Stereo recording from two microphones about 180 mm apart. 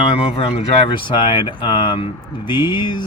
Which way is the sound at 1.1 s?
25° left (ahead or behind).